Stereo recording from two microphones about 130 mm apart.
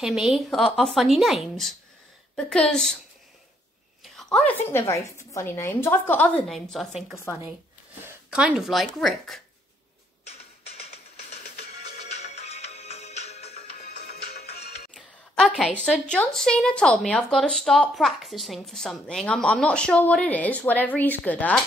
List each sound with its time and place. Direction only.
0.0 s a woman's voice: 5° right (ahead or behind)
4.2 s a sound: 5° left (ahead or behind)
4.6 s speech: 20° left (ahead or behind); by 6.9 s 5° left (ahead or behind)
8.0 s a woman's voice: 10° right (ahead or behind)
10.2 s music: 55° left (ahead or behind)
12.2 s music: 55° left (ahead or behind)
15.0 s a sound: 5° left (ahead or behind)
15.8 s speech: 5° left (ahead or behind)